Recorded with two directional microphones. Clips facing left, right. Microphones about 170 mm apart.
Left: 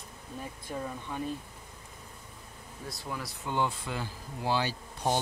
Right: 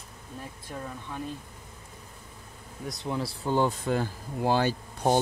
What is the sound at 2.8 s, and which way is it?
Speech, 20° right (ahead or behind).